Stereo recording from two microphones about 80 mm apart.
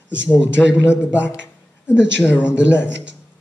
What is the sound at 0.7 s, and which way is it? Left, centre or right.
Speech, left.